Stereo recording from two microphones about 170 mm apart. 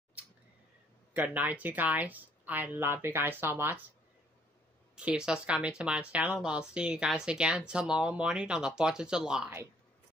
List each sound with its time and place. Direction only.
1.1 s speech: 10° right (ahead or behind)
4.9 s speech: 5° right (ahead or behind)